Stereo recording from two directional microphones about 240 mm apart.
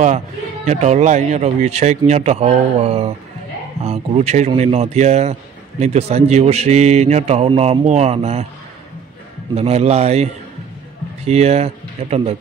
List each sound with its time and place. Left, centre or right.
0.7 s speech: right
9.6 s speech: right